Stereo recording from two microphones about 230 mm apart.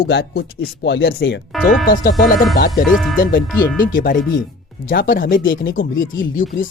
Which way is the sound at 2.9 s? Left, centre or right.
Centre.